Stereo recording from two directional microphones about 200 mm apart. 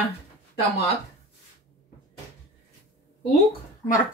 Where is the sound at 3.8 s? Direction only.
10° left (ahead or behind).